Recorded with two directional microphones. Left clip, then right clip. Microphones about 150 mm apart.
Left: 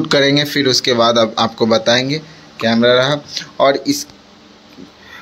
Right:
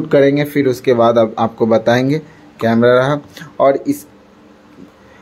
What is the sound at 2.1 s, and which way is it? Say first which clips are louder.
Speech: right 3 dB; 40° right (ahead or behind).